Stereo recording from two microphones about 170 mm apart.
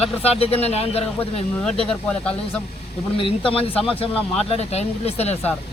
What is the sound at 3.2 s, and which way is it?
Speech, 30° left (ahead or behind).